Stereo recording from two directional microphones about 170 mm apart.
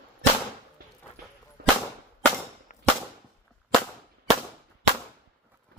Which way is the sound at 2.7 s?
50° left (ahead or behind).